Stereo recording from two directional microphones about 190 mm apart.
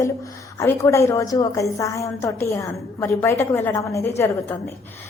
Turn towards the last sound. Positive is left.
turn(degrees=10)  # may be behind; listen again after turning